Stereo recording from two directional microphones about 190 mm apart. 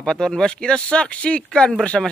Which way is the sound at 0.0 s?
5° left (ahead or behind).